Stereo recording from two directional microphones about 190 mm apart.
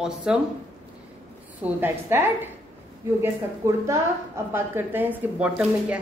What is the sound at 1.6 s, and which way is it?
A woman's voice, 10° right (ahead or behind).